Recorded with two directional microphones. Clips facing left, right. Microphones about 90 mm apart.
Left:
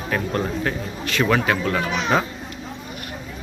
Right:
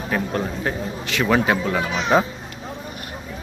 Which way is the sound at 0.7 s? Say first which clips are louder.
Right 1 dB; 25° right (ahead or behind).